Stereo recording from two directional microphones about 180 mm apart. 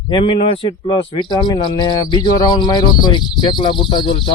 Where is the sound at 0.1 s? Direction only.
30° left (ahead or behind).